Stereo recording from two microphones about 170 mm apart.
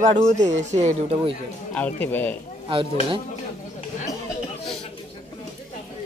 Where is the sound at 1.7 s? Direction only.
10° left (ahead or behind).